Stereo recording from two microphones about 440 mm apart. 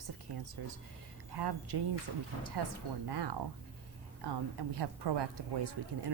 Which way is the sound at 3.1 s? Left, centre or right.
Right.